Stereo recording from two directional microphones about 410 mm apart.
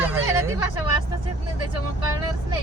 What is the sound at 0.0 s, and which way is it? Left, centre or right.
Hubbub, centre.